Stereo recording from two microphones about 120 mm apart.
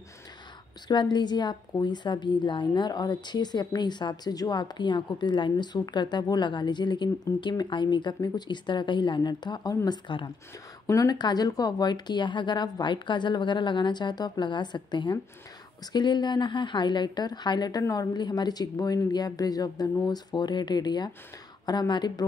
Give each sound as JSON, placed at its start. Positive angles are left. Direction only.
{"t": 0.8, "sound": "a woman's voice", "side_deg": 40}
{"t": 10.9, "sound": "a woman's voice", "side_deg": 30}